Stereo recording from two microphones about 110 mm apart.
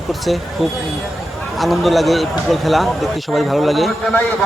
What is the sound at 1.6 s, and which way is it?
Speech, centre (ahead or behind).